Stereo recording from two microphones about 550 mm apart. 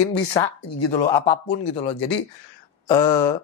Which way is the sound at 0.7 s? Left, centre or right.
Left.